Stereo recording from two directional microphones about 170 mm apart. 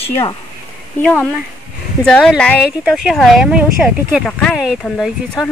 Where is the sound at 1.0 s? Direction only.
10° left (ahead or behind).